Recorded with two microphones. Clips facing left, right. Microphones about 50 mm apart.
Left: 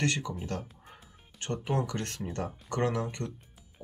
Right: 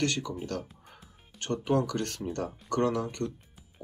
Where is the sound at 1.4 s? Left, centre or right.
Left.